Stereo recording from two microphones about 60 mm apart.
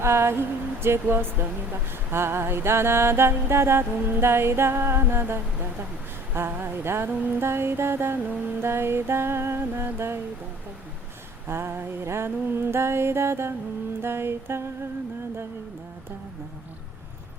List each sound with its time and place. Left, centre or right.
0.0 s speech: right
11.4 s speech: right